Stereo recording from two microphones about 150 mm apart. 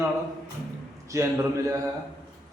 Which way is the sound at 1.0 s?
20° right (ahead or behind).